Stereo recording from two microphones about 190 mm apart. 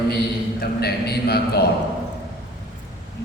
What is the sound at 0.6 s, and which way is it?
A man's voice, 55° left (ahead or behind).